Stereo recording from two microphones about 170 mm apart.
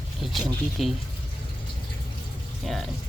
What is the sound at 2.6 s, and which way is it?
Speech, centre (ahead or behind).